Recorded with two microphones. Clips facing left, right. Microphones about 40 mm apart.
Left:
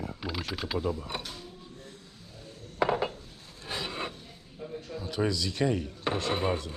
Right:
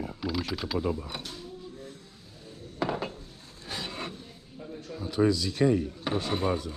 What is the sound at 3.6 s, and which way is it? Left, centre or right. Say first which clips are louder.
Filing: left 2 dB; centre.